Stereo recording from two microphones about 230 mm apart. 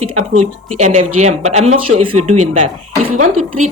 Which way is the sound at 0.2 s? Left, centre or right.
Right.